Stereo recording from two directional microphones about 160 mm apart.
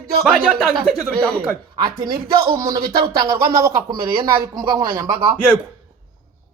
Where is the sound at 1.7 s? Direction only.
25° right (ahead or behind).